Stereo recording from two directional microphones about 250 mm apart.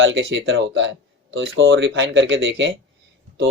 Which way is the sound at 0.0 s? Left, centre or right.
Right.